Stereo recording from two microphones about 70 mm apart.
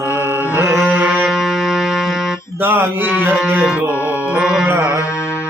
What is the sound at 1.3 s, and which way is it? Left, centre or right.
Music, centre.